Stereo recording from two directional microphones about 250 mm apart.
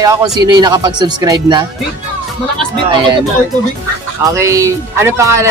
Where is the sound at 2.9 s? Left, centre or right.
Centre.